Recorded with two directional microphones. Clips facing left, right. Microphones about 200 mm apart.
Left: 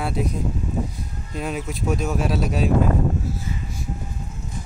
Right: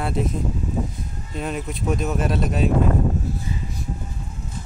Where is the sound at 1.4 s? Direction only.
Centre (ahead or behind).